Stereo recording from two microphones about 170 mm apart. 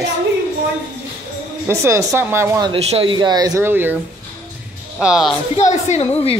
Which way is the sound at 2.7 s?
35° right (ahead or behind).